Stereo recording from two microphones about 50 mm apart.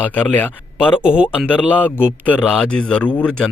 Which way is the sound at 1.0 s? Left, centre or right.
Right.